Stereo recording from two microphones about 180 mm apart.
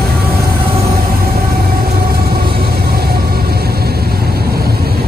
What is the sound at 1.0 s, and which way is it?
Train, 55° right (ahead or behind).